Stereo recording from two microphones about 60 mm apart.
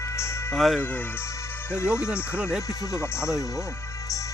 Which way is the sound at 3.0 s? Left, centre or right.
Left.